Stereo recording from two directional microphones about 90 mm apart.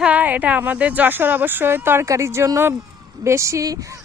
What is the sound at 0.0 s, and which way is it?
A woman's voice, 15° right (ahead or behind).